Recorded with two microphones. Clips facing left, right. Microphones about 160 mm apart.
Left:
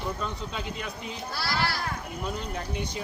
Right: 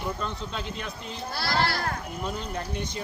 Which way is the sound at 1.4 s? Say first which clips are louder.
Right 3 dB; 60° right (ahead or behind).